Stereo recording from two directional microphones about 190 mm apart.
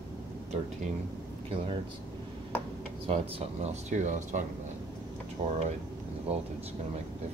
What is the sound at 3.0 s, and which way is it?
Speech, 35° right (ahead or behind).